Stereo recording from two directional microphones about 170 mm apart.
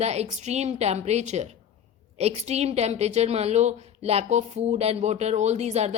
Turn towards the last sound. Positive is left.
turn(degrees=-40)  # may be behind; listen again after turning